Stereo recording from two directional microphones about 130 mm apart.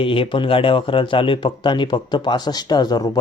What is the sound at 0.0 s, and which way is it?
A man's voice, 45° left (ahead or behind).